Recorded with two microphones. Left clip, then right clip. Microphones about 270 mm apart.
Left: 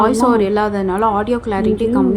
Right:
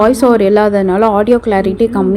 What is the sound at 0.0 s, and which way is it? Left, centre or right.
A woman's voice, centre.